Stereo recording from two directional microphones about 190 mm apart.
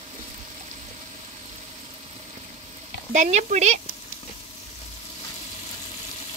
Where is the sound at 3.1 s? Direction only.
40° right (ahead or behind).